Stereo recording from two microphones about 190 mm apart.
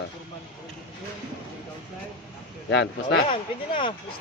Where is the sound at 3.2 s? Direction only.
30° left (ahead or behind).